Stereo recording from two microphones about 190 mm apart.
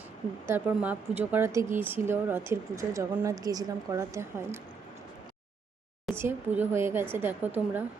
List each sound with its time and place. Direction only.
0.4 s speech: 10° right (ahead or behind)
6.1 s speech: 10° right (ahead or behind)